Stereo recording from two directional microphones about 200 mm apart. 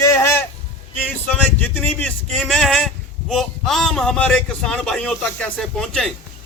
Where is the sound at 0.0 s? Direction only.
15° left (ahead or behind).